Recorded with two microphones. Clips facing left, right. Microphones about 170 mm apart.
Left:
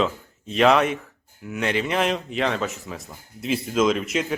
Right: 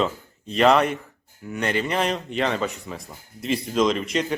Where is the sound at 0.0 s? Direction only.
Centre (ahead or behind).